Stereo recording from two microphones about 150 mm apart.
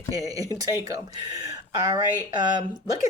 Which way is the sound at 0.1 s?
25° right (ahead or behind).